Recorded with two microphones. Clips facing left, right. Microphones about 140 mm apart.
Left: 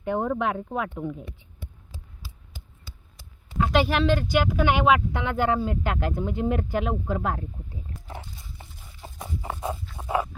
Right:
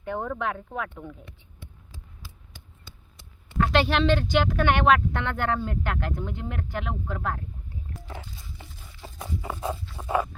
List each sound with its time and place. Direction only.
0.0 s speech: 20° left (ahead or behind)
3.7 s speech: 5° left (ahead or behind); by 8.6 s 20° left (ahead or behind)
8.9 s a sound: 10° left (ahead or behind)
10.0 s patter: 10° left (ahead or behind)